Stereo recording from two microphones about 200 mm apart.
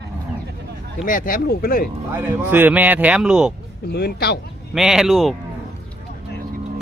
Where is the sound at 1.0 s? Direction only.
45° left (ahead or behind).